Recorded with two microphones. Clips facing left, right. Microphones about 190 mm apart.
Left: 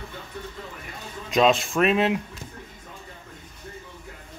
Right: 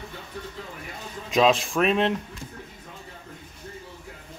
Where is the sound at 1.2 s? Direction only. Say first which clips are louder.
Even; centre (ahead or behind).